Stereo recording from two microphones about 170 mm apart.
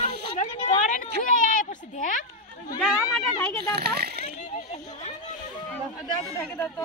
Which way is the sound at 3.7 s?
70° right (ahead or behind).